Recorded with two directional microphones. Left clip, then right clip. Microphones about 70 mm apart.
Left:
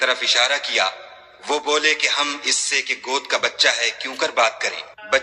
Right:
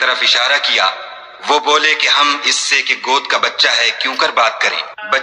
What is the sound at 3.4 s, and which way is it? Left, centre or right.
Speech, left.